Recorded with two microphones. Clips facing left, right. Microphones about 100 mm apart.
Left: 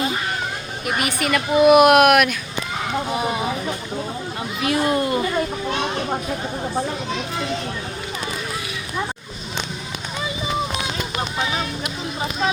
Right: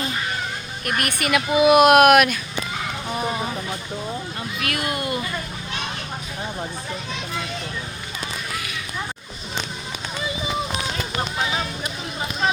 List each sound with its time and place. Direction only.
0.9 s speech: 5° left (ahead or behind)
3.1 s speech: 10° left (ahead or behind)
4.6 s speech: 25° left (ahead or behind)